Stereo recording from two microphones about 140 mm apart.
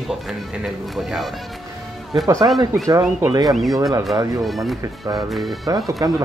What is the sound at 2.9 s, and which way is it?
Speech, 25° right (ahead or behind).